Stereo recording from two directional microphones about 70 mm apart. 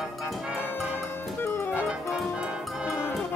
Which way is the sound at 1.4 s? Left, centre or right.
Left.